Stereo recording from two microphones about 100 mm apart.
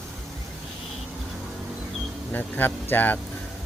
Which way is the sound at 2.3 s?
20° left (ahead or behind).